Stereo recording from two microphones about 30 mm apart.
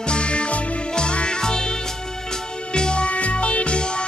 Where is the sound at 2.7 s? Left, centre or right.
Left.